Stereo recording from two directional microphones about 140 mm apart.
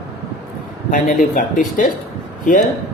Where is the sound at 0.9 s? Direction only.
65° left (ahead or behind).